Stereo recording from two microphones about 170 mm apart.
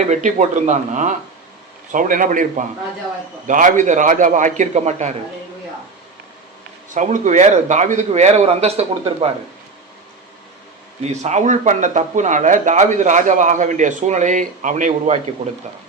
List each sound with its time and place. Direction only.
0.1 s speech: 45° right (ahead or behind)
6.9 s speech: 45° right (ahead or behind)
11.2 s speech: 45° right (ahead or behind)